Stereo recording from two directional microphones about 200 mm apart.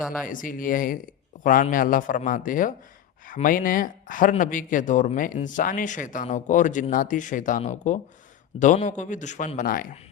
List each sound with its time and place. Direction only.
0.3 s speech: 40° left (ahead or behind)